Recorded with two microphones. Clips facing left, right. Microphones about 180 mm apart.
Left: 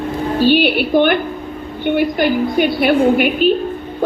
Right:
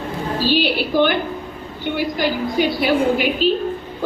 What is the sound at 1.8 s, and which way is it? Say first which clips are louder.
A woman's voice: left 6 dB; 55° left (ahead or behind).